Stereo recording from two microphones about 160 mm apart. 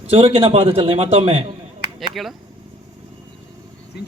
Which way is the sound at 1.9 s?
Centre (ahead or behind).